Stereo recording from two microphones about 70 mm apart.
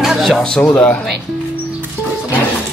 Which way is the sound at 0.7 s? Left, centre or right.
Left.